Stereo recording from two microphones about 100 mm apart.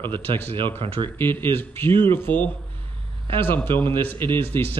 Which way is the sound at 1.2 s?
20° left (ahead or behind).